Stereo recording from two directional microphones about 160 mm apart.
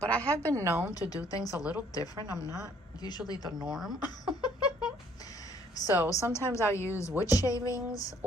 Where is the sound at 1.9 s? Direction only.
20° left (ahead or behind).